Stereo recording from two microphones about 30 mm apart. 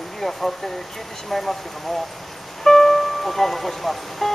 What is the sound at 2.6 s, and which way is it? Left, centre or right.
Music, centre.